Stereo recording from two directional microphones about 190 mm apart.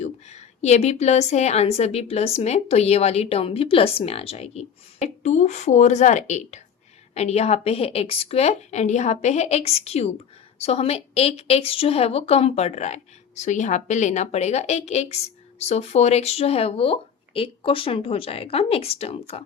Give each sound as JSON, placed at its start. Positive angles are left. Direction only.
{"t": 0.0, "sound": "a woman's voice", "side_deg": 35}